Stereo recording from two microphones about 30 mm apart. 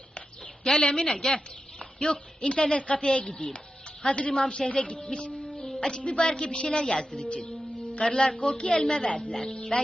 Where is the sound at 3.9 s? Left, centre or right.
Left.